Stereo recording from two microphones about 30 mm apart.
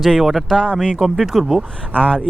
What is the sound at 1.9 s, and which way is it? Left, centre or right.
Speech, left.